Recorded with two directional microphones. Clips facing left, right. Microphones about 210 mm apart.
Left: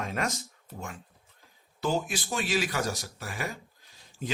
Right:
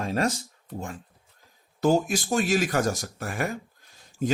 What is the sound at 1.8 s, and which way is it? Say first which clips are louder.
Speech: right 7 dB; 45° right (ahead or behind).